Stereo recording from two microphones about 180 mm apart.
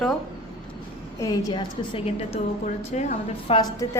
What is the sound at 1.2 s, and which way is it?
A woman's voice, 20° left (ahead or behind).